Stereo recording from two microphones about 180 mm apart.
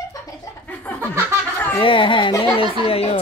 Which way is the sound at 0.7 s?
10° left (ahead or behind).